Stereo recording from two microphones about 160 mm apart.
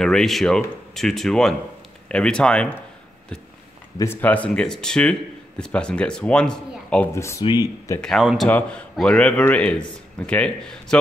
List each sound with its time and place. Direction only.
0.0 s a man's voice: centre (ahead or behind)
4.0 s a man's voice: 10° left (ahead or behind)
7.2 s a man's voice: 15° left (ahead or behind)
8.0 s a man's voice: centre (ahead or behind)